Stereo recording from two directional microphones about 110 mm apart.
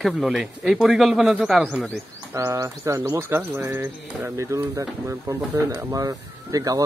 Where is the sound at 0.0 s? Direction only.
Centre (ahead or behind).